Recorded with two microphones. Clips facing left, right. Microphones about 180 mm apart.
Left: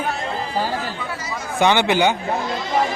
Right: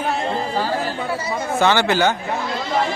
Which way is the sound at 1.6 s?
15° left (ahead or behind).